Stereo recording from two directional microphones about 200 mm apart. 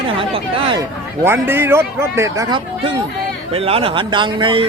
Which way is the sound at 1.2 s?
10° right (ahead or behind).